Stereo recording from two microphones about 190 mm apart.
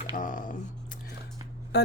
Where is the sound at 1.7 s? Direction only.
60° left (ahead or behind).